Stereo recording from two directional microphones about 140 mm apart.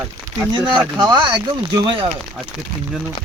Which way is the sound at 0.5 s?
30° right (ahead or behind).